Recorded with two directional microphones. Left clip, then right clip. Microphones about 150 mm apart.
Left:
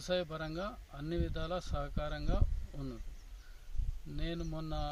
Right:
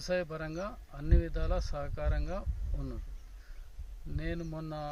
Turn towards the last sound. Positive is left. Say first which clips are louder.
# right 1 dB
turn(degrees=-20)  # may be behind; listen again after turning